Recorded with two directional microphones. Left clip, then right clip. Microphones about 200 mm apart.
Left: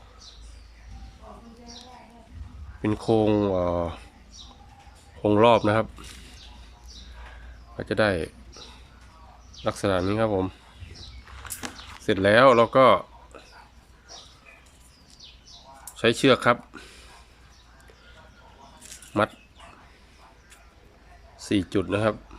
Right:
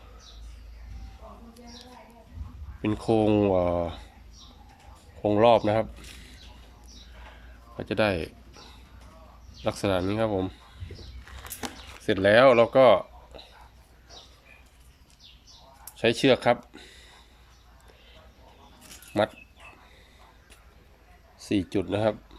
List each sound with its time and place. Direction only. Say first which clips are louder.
2.8 s speech: left 2 dB; centre (ahead or behind)
5.2 s speech: left 1 dB; 5° left (ahead or behind)
7.8 s speech: left 2 dB; centre (ahead or behind)
9.6 s speech: left 2 dB; centre (ahead or behind)
11.6 s a sound: right 1 dB; 30° right (ahead or behind)
11.9 s speech: left 1 dB; centre (ahead or behind)
16.0 s speech: left 2 dB; centre (ahead or behind)
19.1 s speech: left 1 dB; 5° left (ahead or behind)
21.3 s speech: left 2 dB; centre (ahead or behind)